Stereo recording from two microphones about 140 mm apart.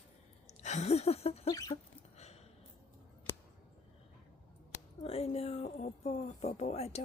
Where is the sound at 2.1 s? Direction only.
50° left (ahead or behind).